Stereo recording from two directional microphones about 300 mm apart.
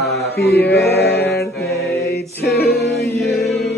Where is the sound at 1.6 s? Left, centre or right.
Left.